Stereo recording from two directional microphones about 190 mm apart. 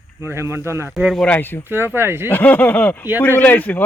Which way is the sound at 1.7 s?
10° right (ahead or behind).